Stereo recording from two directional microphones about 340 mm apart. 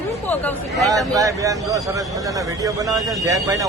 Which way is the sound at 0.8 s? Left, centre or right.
Centre.